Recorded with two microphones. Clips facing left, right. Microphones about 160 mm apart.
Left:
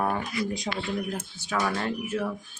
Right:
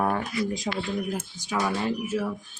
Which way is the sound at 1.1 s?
10° right (ahead or behind).